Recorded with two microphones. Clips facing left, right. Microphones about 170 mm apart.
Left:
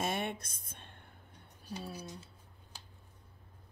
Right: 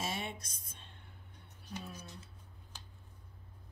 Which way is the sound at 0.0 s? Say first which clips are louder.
Left 5 dB; 55° left (ahead or behind).